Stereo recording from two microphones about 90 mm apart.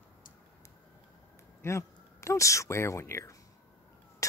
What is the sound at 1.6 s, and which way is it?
Speech, 30° left (ahead or behind).